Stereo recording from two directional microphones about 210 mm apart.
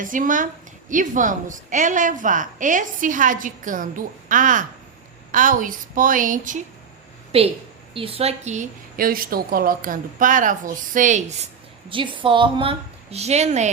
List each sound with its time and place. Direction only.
0.0 s a woman's voice: 40° right (ahead or behind)
7.3 s a woman's voice: 30° right (ahead or behind)
11.9 s a woman's voice: 25° right (ahead or behind)